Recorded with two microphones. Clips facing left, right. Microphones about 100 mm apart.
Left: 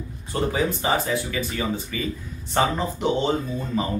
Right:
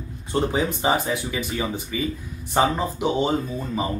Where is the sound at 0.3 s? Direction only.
20° right (ahead or behind).